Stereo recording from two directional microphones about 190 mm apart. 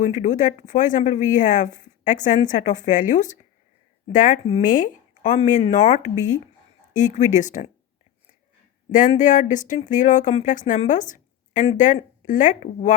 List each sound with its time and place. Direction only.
0.0 s speech: 40° left (ahead or behind)
8.9 s speech: 45° left (ahead or behind)